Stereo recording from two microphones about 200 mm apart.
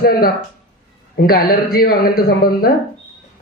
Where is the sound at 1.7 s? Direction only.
45° left (ahead or behind).